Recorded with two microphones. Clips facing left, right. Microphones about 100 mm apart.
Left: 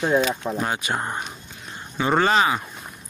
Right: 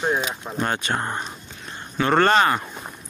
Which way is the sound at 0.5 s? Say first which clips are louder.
Right 1 dB; 5° left (ahead or behind).